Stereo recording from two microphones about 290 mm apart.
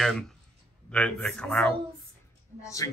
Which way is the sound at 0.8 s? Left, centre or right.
Centre.